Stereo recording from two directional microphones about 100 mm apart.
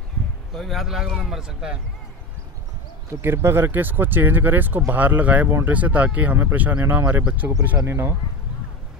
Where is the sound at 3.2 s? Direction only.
25° right (ahead or behind).